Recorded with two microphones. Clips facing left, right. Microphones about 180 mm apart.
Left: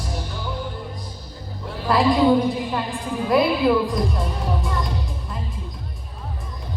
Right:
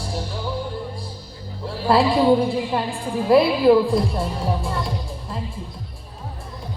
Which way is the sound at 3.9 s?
30° right (ahead or behind).